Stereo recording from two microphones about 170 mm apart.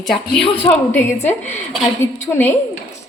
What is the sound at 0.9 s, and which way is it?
Speech, 10° left (ahead or behind).